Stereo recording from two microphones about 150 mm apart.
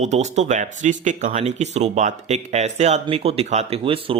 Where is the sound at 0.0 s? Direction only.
50° right (ahead or behind).